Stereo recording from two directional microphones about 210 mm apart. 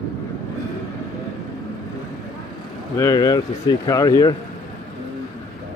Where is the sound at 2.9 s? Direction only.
15° left (ahead or behind).